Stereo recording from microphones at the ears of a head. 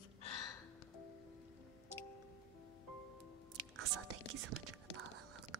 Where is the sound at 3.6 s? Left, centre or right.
Right.